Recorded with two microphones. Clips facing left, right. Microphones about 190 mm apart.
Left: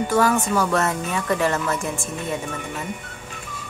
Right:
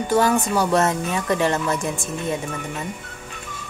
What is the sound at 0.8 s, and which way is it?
Speech, 20° right (ahead or behind).